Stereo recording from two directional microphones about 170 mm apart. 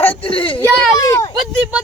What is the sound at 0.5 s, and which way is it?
Speech, 15° left (ahead or behind).